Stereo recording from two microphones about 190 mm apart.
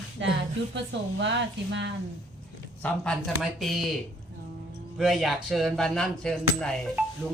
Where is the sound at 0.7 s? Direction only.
70° right (ahead or behind).